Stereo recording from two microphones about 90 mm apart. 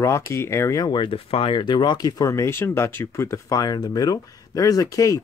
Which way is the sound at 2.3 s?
30° left (ahead or behind).